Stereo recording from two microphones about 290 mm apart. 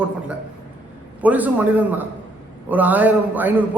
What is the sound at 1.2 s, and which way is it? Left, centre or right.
A man's voice, centre.